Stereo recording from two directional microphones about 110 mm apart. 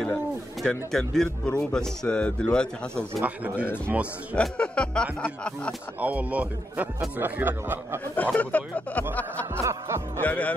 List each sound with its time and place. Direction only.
0.6 s speech: 5° left (ahead or behind)
3.3 s a man's voice: 15° right (ahead or behind)
4.4 s speech: 10° left (ahead or behind)
5.9 s a man's voice: 15° right (ahead or behind)
8.2 s speech: 15° left (ahead or behind)
9.6 s speech: 25° right (ahead or behind)
10.2 s speech: 15° left (ahead or behind)